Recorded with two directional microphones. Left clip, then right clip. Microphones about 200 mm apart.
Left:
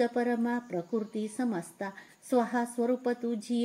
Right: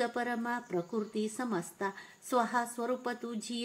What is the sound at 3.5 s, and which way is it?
Speech, 50° left (ahead or behind).